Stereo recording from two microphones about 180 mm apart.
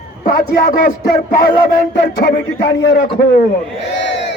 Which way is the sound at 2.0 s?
60° left (ahead or behind).